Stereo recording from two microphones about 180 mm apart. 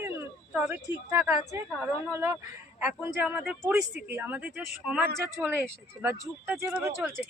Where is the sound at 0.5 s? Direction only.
10° right (ahead or behind).